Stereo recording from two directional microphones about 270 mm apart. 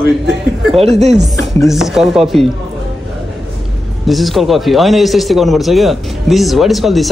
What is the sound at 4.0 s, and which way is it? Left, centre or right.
A man's voice, centre.